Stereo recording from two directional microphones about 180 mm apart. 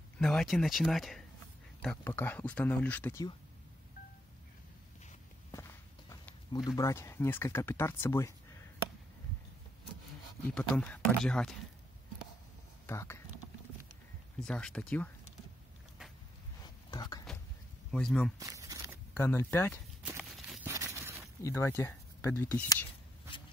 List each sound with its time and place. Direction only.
0.2 s speech: 5° left (ahead or behind)
5.5 s speech: 15° left (ahead or behind)
10.5 s speech: 5° left (ahead or behind)
12.8 s speech: 15° left (ahead or behind)
14.4 s speech: 5° left (ahead or behind)
16.6 s a sound: 20° left (ahead or behind)
17.9 s speech: 5° left (ahead or behind)
18.4 s tearing: 20° right (ahead or behind)
19.1 s speech: 15° left (ahead or behind)
20.2 s a sound: centre (ahead or behind)
20.6 s a sound: 15° right (ahead or behind)
21.5 s speech: 15° left (ahead or behind)